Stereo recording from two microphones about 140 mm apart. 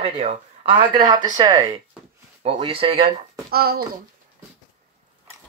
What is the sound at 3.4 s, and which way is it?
Speech, 90° right.